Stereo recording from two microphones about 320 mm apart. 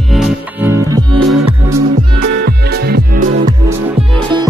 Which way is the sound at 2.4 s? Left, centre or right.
Right.